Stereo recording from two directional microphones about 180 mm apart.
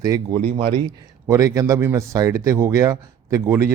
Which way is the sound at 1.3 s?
20° right (ahead or behind).